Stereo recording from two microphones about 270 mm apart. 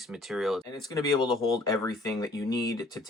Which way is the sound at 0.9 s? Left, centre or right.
Centre.